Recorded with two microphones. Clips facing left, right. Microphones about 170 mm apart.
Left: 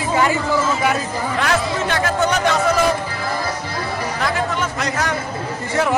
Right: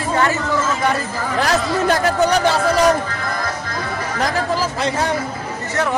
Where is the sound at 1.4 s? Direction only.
35° right (ahead or behind).